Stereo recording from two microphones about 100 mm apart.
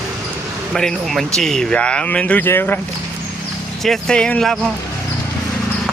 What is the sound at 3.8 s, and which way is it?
Speech, 5° left (ahead or behind).